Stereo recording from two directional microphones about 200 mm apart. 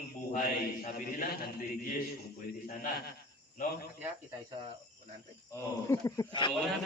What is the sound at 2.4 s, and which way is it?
Speech, 50° left (ahead or behind).